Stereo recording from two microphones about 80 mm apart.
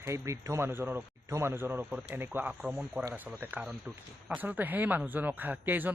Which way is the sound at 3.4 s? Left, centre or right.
Right.